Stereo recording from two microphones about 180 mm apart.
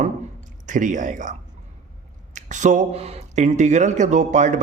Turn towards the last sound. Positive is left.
turn(degrees=-40)  # may be behind; listen again after turning